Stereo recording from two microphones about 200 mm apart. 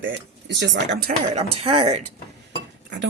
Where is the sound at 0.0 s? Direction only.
65° right (ahead or behind).